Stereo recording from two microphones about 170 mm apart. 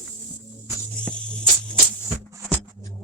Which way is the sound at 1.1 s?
5° left (ahead or behind).